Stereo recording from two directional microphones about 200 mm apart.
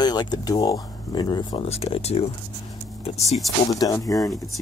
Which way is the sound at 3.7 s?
15° left (ahead or behind).